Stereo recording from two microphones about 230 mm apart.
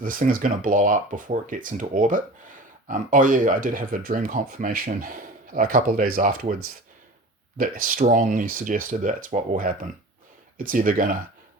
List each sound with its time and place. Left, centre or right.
0.0 s speech: right
7.6 s speech: right